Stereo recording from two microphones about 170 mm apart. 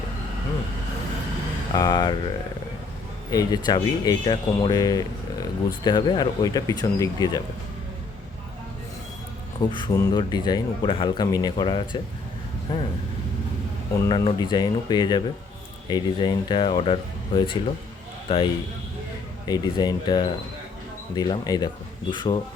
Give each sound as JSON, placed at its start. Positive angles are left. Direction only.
{"t": 1.7, "sound": "speech", "side_deg": 25}
{"t": 3.2, "sound": "speech", "side_deg": 20}
{"t": 9.6, "sound": "speech", "side_deg": 25}
{"t": 14.1, "sound": "speech", "side_deg": 25}
{"t": 19.5, "sound": "speech", "side_deg": 25}